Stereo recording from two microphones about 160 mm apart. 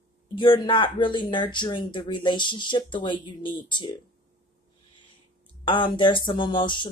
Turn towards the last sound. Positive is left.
turn(degrees=30)  # may be behind; listen again after turning